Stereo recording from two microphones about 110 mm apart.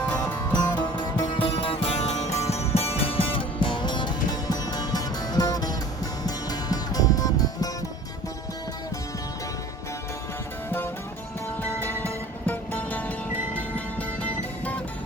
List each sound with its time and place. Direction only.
0.0 s music: 15° left (ahead or behind)
0.5 s music: 40° left (ahead or behind)
2.0 s music: 90° left
2.5 s music: 70° left (ahead or behind); by 7.7 s 30° left (ahead or behind)
10.7 s music: 20° left (ahead or behind)